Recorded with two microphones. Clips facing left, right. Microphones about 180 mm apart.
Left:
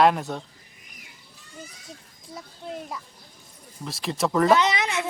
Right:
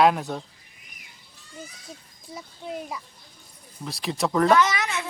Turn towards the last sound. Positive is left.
turn(degrees=20)  # may be behind; listen again after turning